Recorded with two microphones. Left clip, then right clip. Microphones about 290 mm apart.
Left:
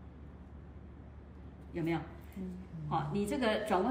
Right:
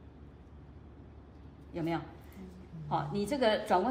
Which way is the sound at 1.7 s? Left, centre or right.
Centre.